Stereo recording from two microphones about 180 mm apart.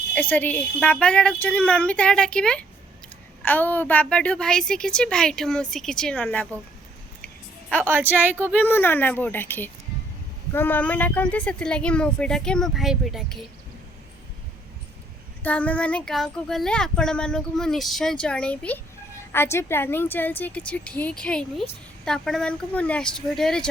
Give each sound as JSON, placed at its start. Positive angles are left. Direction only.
{"t": 0.1, "sound": "a woman's voice", "side_deg": 10}
{"t": 7.9, "sound": "a woman's voice", "side_deg": -10}
{"t": 8.5, "sound": "a woman's voice", "side_deg": 10}
{"t": 15.4, "sound": "a woman's voice", "side_deg": 10}